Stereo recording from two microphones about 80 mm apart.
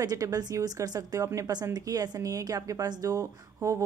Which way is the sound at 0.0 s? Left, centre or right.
Right.